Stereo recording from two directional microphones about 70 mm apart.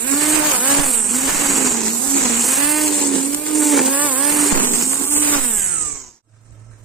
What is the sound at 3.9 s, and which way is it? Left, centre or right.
Vehicle, centre.